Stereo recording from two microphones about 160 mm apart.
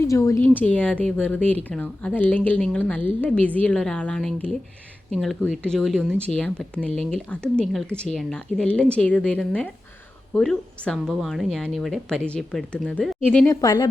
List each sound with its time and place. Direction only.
0.1 s speech: 20° left (ahead or behind)
0.4 s a woman's voice: 10° left (ahead or behind)
13.5 s speech: 20° left (ahead or behind)